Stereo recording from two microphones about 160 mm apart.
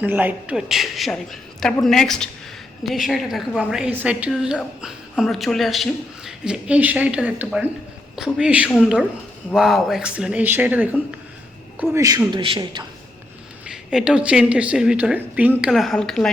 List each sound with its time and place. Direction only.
0.0 s a woman's voice: 10° right (ahead or behind)
11.8 s a man's voice: 20° right (ahead or behind)
12.3 s a man's voice: 30° right (ahead or behind)
13.7 s a woman's voice: 5° right (ahead or behind)
15.7 s a woman's voice: centre (ahead or behind)